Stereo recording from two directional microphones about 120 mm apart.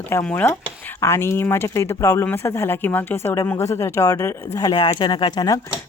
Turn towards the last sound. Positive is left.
turn(degrees=35)  # may be behind; listen again after turning